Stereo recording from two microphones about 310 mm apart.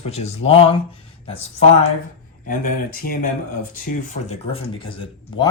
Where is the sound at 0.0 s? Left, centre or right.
Centre.